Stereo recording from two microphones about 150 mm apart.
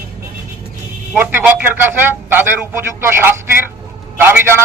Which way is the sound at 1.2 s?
15° right (ahead or behind).